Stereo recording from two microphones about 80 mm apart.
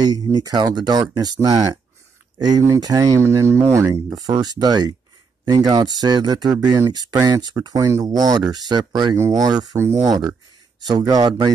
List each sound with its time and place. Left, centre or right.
0.0 s speech: right
3.3 s speech: right
4.1 s speech: right
9.1 s speech: right